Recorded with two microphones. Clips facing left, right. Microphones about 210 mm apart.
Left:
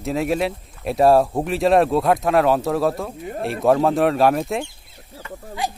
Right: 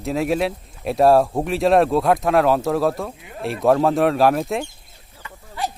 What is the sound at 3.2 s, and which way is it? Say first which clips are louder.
Speech: left 8 dB; 45° left (ahead or behind).